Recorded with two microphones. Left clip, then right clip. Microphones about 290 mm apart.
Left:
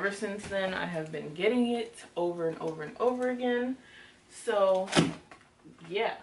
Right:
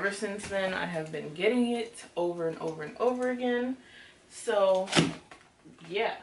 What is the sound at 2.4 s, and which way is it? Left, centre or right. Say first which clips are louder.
A woman's voice: even; centre.